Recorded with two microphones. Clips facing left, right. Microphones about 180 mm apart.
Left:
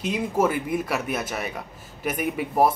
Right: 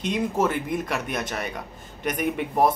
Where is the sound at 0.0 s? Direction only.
5° left (ahead or behind).